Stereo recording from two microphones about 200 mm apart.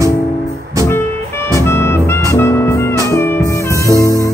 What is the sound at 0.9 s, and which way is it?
Music, 10° left (ahead or behind).